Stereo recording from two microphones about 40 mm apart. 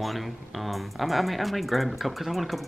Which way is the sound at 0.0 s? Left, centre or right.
Centre.